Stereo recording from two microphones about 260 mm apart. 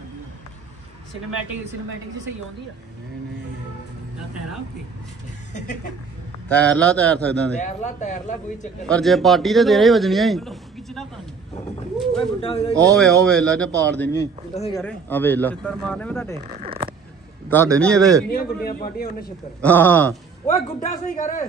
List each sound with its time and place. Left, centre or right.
6.5 s a man's voice: centre
7.6 s a man's voice: left
8.8 s a man's voice: centre
12.4 s a man's voice: left
12.9 s a man's voice: centre
14.5 s a man's voice: left
14.8 s a man's voice: centre
16.6 s a sound: right
17.7 s a man's voice: centre
18.3 s a man's voice: left
19.6 s speech: centre
20.4 s a man's voice: left